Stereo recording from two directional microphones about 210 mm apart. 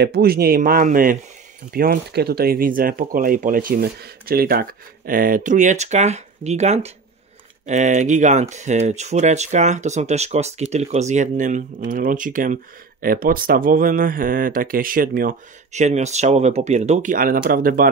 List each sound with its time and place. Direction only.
0.0 s speech: 50° right (ahead or behind)